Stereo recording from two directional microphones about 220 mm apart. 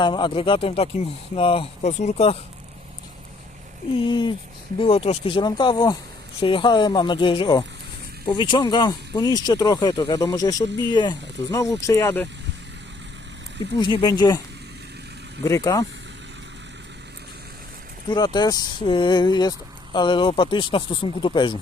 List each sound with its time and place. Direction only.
0.0 s speech: 20° left (ahead or behind)
3.9 s speech: 20° left (ahead or behind)
13.7 s speech: 20° left (ahead or behind)
15.4 s speech: 15° left (ahead or behind)
18.1 s speech: 20° left (ahead or behind)